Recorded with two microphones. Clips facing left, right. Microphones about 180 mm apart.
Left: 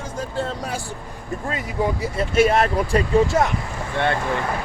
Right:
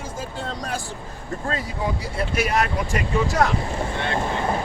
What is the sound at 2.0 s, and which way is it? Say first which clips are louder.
Speech: left 10 dB; 25° left (ahead or behind).